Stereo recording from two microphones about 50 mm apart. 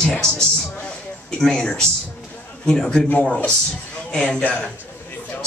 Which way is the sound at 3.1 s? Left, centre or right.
Left.